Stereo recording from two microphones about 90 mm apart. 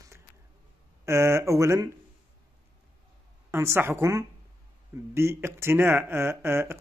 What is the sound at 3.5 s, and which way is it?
Speech, 30° right (ahead or behind).